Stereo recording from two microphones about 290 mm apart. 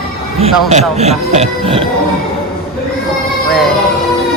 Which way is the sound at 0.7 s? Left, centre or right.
Right.